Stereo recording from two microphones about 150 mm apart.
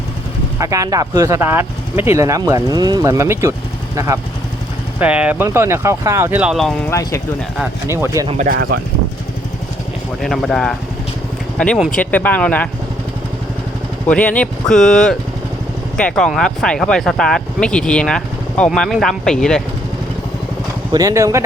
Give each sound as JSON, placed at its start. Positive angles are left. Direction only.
{"t": 0.6, "sound": "speech", "side_deg": -20}
{"t": 4.9, "sound": "speech", "side_deg": -10}
{"t": 6.9, "sound": "speech", "side_deg": 20}
{"t": 7.9, "sound": "speech", "side_deg": -20}
{"t": 8.4, "sound": "speech", "side_deg": -90}
{"t": 10.2, "sound": "speech", "side_deg": 0}
{"t": 14.1, "sound": "speech", "side_deg": 10}
{"t": 20.9, "sound": "speech", "side_deg": -20}